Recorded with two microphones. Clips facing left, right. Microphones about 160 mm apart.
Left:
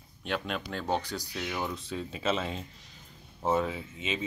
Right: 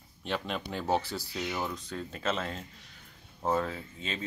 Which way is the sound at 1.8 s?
10° left (ahead or behind).